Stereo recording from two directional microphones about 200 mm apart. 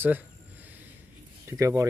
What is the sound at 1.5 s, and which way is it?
Speech, 15° right (ahead or behind).